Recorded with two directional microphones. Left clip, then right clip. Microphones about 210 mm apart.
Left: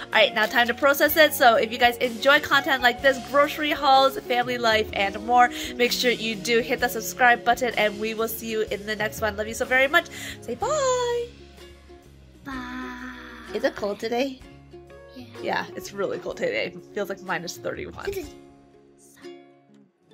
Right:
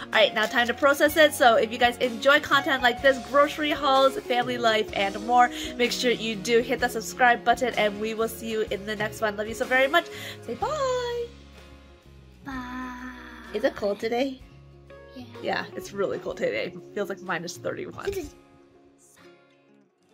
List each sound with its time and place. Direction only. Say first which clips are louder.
0.0 s a woman's voice: left 2 dB; 5° right (ahead or behind)
10.6 s a child's voice: left 3 dB; 20° left (ahead or behind)
12.4 s a sound: left 1 dB; centre (ahead or behind)
13.6 s a woman's voice: even; 10° left (ahead or behind); by 18.1 s 5° right (ahead or behind)